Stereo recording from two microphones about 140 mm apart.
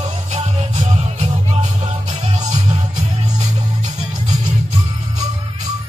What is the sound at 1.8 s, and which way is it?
Music, 50° right (ahead or behind).